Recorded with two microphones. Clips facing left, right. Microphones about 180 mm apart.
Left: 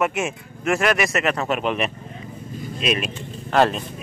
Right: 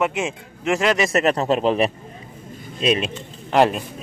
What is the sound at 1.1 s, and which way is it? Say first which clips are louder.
Speech: right 4 dB; 35° right (ahead or behind).